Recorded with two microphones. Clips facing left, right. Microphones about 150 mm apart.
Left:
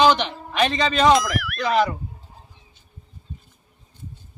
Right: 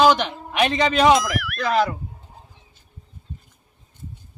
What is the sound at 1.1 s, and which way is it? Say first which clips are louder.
Speech: even; centre (ahead or behind).